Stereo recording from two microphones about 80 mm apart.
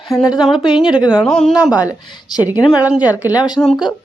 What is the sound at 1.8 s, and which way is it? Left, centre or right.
Speech, left.